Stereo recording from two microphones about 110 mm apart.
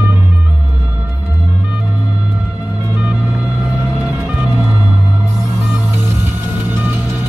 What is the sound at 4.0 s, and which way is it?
Music, 10° right (ahead or behind).